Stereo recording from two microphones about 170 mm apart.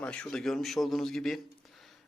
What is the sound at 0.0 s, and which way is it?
A man's voice, 5° left (ahead or behind).